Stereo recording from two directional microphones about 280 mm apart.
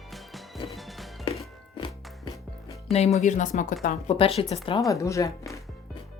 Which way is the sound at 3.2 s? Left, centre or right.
Left.